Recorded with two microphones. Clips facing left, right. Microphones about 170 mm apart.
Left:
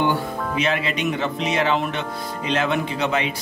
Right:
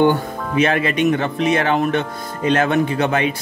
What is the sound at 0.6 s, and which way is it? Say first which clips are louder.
Speech: right 7 dB; 50° right (ahead or behind).